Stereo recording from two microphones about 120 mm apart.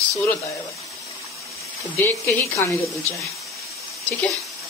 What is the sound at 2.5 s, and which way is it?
Speech, 25° left (ahead or behind).